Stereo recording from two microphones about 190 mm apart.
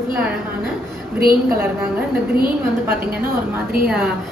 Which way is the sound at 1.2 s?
50° right (ahead or behind).